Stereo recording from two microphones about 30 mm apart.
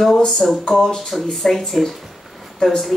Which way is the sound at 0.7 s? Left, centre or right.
Left.